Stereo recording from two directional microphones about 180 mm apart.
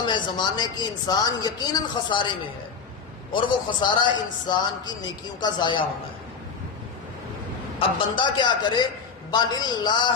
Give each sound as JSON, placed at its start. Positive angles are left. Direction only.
{"t": 0.0, "sound": "a woman's voice", "side_deg": 25}
{"t": 3.3, "sound": "a woman's voice", "side_deg": 25}
{"t": 7.8, "sound": "a woman's voice", "side_deg": 25}